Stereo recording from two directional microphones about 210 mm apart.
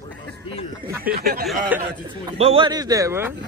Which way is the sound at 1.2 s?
45° right (ahead or behind).